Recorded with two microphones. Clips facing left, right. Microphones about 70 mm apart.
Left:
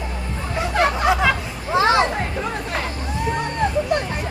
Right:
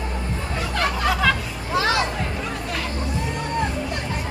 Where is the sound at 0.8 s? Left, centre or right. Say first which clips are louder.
Left 4 dB; left.